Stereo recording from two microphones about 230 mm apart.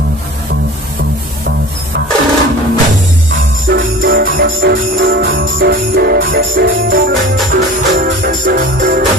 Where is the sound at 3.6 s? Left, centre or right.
Right.